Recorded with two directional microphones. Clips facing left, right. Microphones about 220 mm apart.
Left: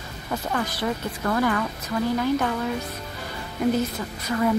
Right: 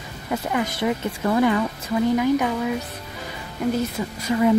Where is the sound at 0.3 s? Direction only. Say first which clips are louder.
Right 3 dB; 15° right (ahead or behind).